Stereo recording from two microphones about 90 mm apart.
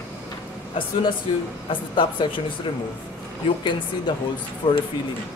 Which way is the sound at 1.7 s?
65° left (ahead or behind).